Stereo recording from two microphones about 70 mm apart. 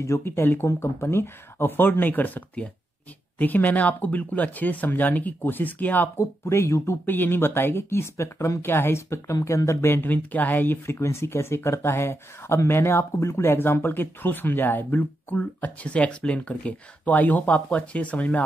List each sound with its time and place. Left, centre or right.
0.0 s speech: left
6.1 s speech: left
7.1 s speech: left
8.6 s speech: left